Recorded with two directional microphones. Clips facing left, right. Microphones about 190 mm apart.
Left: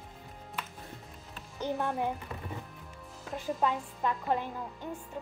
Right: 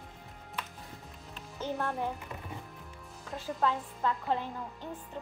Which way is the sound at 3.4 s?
15° left (ahead or behind).